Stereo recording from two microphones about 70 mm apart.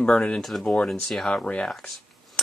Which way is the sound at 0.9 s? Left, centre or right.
Centre.